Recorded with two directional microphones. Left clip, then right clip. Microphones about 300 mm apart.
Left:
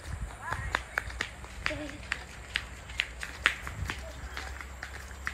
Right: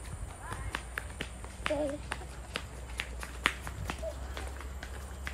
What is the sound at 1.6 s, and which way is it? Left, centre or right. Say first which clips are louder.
Run: right 3 dB; centre.